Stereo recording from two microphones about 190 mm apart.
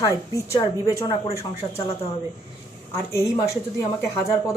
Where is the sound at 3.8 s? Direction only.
20° left (ahead or behind).